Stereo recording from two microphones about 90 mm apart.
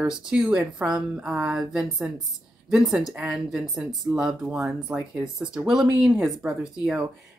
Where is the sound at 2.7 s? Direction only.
5° right (ahead or behind).